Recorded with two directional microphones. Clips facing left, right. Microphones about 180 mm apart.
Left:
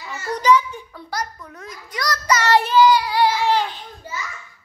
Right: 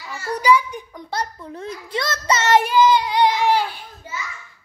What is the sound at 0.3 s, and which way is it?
Speech, 10° right (ahead or behind).